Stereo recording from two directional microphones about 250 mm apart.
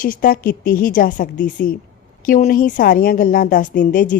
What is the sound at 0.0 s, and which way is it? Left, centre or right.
Speech, left.